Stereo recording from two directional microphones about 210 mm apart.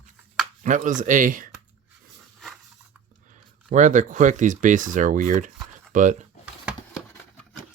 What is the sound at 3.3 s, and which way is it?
Speech, 35° right (ahead or behind).